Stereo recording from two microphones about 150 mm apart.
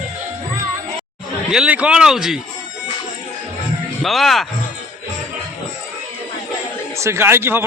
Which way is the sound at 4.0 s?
Centre (ahead or behind).